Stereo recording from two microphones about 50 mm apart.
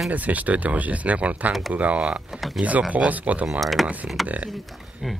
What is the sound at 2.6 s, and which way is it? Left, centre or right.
Speech, right.